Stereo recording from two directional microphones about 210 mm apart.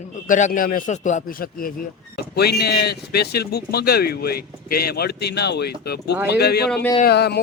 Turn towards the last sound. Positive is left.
turn(degrees=50)  # may be behind; listen again after turning